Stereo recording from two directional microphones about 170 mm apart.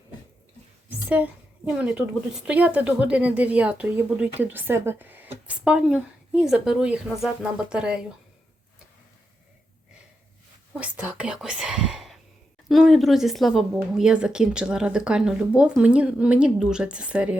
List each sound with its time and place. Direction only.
0.9 s a woman's voice: 10° right (ahead or behind)
10.8 s speech: 5° right (ahead or behind)